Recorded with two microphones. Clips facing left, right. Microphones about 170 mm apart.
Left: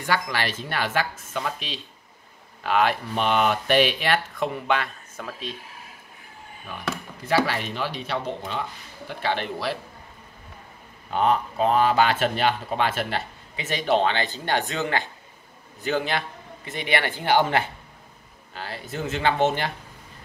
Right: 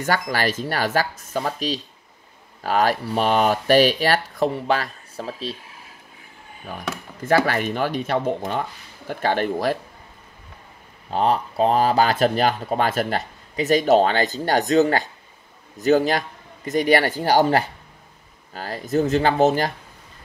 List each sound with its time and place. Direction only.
0.0 s speech: 45° right (ahead or behind)
6.7 s speech: 40° right (ahead or behind)
7.2 s speech: 50° right (ahead or behind)
11.1 s speech: 35° right (ahead or behind)